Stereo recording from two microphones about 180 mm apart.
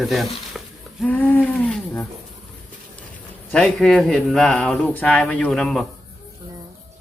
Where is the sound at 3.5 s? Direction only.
5° left (ahead or behind).